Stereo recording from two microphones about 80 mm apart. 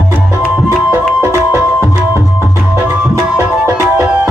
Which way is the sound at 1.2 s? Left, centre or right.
Right.